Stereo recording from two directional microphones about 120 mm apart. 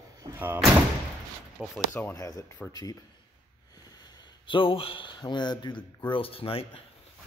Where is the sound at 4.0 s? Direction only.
40° left (ahead or behind).